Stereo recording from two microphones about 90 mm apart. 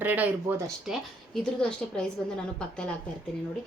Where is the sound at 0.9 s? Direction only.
5° left (ahead or behind).